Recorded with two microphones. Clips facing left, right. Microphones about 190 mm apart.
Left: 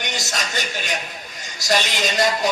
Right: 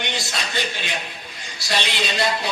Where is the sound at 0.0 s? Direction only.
45° left (ahead or behind).